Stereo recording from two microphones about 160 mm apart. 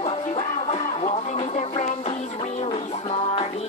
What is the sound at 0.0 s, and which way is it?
Music, 40° left (ahead or behind).